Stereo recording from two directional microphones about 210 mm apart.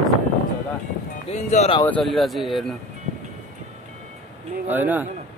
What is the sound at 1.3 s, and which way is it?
Speech, 30° left (ahead or behind).